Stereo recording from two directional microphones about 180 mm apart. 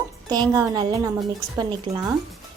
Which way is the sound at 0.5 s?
20° right (ahead or behind).